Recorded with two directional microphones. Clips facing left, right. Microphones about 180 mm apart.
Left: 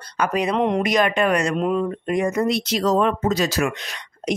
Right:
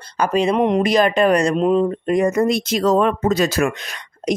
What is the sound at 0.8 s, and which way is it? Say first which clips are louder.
Speech: right 4 dB; 30° right (ahead or behind).